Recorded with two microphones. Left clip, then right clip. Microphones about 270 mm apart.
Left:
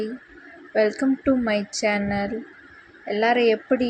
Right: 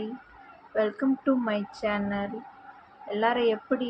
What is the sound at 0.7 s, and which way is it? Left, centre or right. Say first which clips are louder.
Speech: left 6 dB; centre.